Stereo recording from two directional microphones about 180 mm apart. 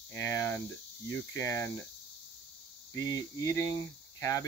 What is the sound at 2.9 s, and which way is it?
Speech, 20° left (ahead or behind).